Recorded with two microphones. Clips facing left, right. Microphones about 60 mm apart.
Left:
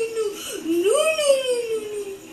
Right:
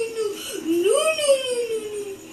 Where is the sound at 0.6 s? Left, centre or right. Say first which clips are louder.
Even; centre.